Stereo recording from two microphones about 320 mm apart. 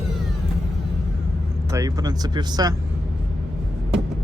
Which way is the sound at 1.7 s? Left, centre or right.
Centre.